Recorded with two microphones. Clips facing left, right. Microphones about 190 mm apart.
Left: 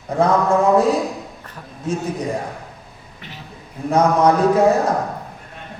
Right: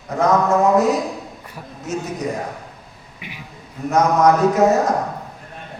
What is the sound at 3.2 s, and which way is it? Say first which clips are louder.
Beatboxing: right 1 dB; 10° right (ahead or behind).